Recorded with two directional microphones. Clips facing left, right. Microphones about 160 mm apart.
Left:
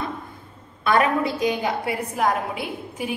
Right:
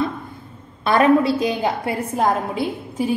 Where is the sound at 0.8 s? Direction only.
30° right (ahead or behind).